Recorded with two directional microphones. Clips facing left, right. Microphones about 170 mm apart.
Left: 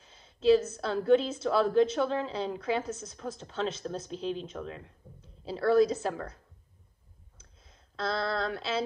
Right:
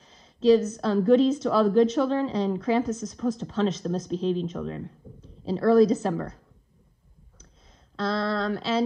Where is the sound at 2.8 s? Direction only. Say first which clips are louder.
Right 10 dB; 25° left (ahead or behind).